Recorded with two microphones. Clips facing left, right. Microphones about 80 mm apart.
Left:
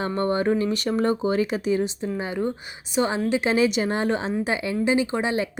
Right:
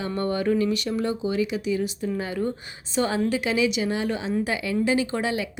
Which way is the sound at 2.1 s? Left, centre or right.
Left.